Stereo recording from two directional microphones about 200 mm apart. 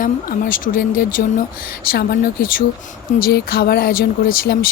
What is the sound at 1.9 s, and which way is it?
Speech, 50° left (ahead or behind).